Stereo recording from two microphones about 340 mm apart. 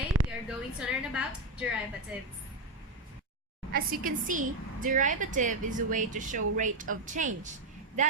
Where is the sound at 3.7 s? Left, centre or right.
Right.